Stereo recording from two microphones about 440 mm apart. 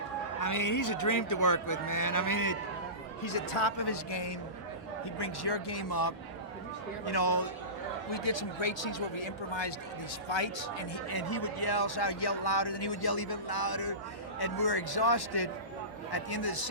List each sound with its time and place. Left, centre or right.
0.3 s speech: left
3.2 s speech: left
8.1 s speech: left
10.2 s speech: left
11.1 s speech: left